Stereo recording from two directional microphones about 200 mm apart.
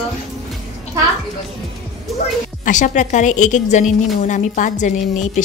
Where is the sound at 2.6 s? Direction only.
40° left (ahead or behind).